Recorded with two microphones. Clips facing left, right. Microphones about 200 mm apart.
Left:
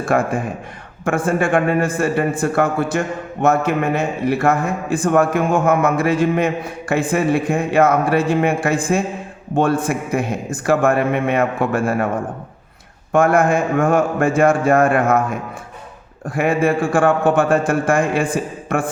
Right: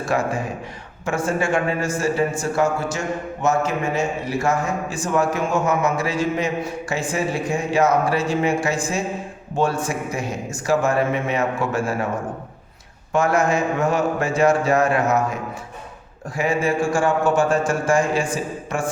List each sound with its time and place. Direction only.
0.0 s a man's voice: 55° left (ahead or behind)
13.1 s a man's voice: 55° left (ahead or behind)